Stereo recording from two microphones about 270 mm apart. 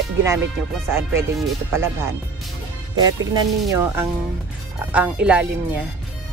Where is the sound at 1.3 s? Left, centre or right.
Centre.